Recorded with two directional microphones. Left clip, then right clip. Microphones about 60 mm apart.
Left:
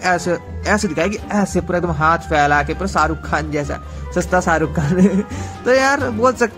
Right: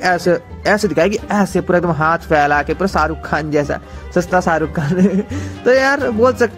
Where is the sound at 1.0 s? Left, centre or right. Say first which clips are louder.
Right 4 dB; right.